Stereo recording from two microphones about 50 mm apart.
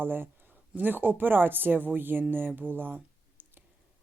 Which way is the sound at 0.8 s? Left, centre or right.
Right.